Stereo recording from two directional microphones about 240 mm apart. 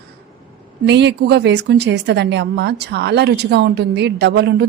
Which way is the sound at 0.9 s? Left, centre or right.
Right.